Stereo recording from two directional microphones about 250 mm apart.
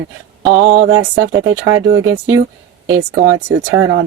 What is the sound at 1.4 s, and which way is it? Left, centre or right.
Speech, right.